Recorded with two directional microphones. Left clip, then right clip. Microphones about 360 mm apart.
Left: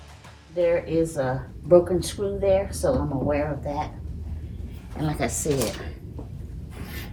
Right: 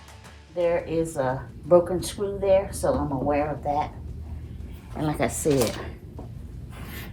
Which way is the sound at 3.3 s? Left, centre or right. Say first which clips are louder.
Right 2 dB; centre.